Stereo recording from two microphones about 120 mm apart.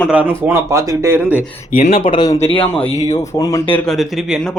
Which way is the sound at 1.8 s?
60° left (ahead or behind).